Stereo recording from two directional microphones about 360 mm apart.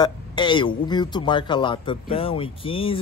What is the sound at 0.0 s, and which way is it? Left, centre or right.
Speech, centre.